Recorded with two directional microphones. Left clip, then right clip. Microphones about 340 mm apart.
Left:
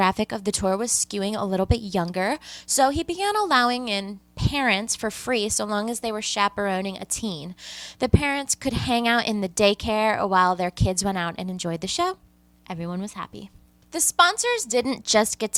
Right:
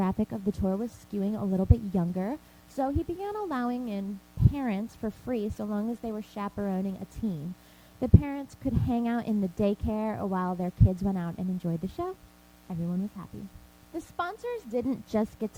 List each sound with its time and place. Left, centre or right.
0.0 s a woman's voice: centre
1.5 s a woman's voice: centre
8.0 s a woman's voice: centre